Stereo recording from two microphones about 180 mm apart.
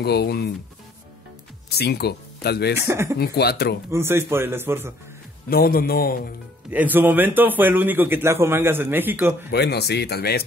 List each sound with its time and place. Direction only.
0.0 s speech: 65° left (ahead or behind)
1.8 s speech: 65° left (ahead or behind)
2.8 s a man's voice: 15° right (ahead or behind)
3.2 s speech: 60° left (ahead or behind)
3.9 s a man's voice: 15° right (ahead or behind)
5.5 s speech: 55° left (ahead or behind)
6.7 s a man's voice: 10° right (ahead or behind)
9.5 s speech: 65° left (ahead or behind)